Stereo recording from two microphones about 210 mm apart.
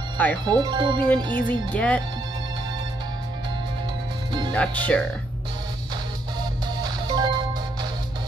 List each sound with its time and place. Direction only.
0.5 s speech: 20° right (ahead or behind)
1.5 s speech: 5° left (ahead or behind)
4.6 s speech: 5° left (ahead or behind)
6.8 s music: 20° right (ahead or behind)